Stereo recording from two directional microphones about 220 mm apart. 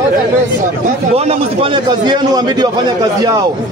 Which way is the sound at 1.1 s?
25° right (ahead or behind).